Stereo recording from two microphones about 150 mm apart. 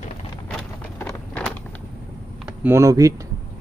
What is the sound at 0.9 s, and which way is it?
Vehicle, 15° left (ahead or behind).